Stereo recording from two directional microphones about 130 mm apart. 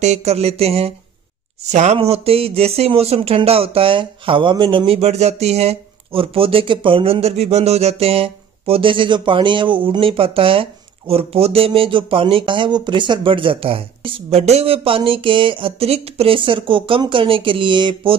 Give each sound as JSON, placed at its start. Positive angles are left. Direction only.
{"t": 0.0, "sound": "speech", "side_deg": -55}